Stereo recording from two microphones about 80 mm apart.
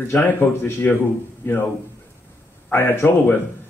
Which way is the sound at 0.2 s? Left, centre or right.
Left.